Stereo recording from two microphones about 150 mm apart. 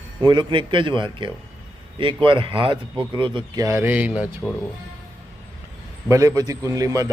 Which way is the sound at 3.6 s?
15° right (ahead or behind).